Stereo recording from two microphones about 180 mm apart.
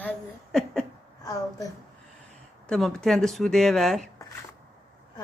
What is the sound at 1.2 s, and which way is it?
Speech, 20° left (ahead or behind).